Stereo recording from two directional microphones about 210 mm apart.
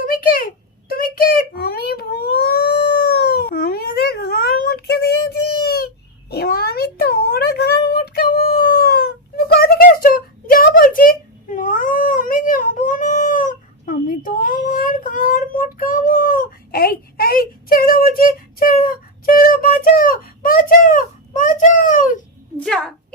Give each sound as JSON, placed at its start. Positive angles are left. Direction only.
{"t": 0.0, "sound": "a sound", "side_deg": 40}
{"t": 0.9, "sound": "a child's voice", "side_deg": 45}
{"t": 22.5, "sound": "a woman's voice", "side_deg": 5}